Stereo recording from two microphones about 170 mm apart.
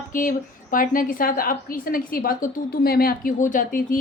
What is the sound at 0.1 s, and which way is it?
A woman's voice, 50° left (ahead or behind).